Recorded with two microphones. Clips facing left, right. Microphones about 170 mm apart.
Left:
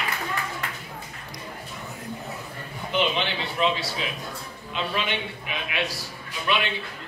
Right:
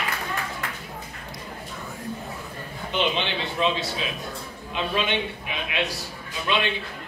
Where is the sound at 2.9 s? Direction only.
20° right (ahead or behind).